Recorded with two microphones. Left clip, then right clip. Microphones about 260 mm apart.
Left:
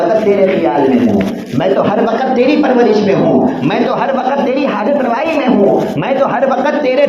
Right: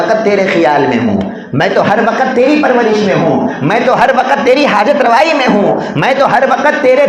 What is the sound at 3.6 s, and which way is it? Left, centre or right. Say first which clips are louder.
A man's voice: right 5 dB; right.